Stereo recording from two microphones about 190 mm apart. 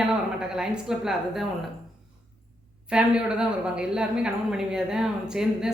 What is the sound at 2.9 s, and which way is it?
A woman's voice, 5° right (ahead or behind).